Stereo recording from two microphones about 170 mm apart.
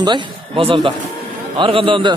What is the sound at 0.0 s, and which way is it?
A man's voice, 30° right (ahead or behind).